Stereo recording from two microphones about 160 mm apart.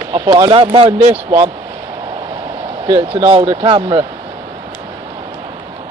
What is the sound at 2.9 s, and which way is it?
Speech, 30° right (ahead or behind).